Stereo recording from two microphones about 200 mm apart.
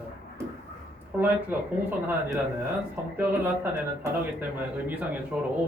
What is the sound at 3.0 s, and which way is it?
Speech, 10° right (ahead or behind).